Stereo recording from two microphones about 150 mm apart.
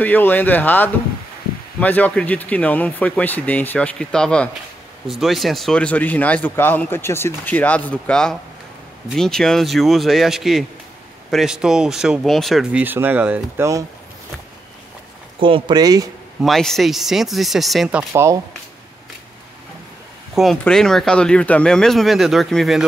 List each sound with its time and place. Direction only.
0.0 s speech: 10° left (ahead or behind)
12.8 s speech: 15° right (ahead or behind)
15.4 s speech: 35° right (ahead or behind)
16.4 s speech: centre (ahead or behind)
18.1 s speech: 20° right (ahead or behind)
20.3 s speech: centre (ahead or behind)